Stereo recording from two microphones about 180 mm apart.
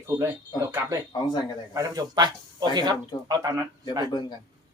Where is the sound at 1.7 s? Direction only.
20° right (ahead or behind).